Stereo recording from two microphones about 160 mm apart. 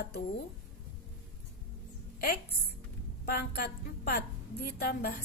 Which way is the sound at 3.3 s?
75° left (ahead or behind).